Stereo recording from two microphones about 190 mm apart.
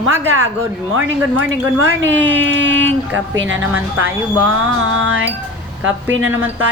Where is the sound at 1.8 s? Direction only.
90° right.